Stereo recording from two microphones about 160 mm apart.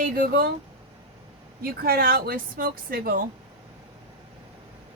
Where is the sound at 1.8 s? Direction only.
75° right (ahead or behind).